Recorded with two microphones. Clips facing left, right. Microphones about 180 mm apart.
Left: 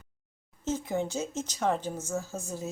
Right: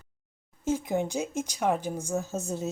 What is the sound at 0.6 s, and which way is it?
Speech, 15° right (ahead or behind).